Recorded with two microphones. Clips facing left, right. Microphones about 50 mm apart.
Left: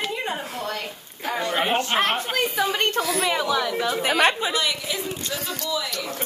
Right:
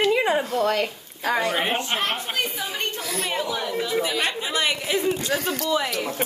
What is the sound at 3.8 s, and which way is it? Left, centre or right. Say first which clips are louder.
Speech: left 1 dB; left.